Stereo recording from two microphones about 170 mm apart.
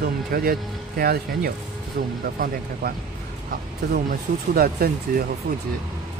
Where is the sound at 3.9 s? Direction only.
65° right (ahead or behind).